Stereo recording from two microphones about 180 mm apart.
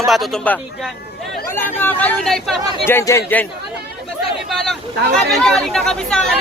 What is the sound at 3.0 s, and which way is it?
Speech, 15° left (ahead or behind).